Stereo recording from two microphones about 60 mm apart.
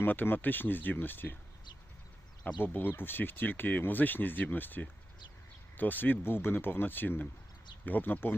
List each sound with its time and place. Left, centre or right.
0.0 s speech: left
2.6 s speech: left